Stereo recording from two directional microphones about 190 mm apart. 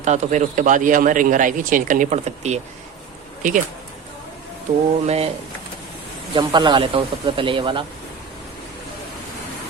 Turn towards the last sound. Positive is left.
turn(degrees=-25)  # may be behind; listen again after turning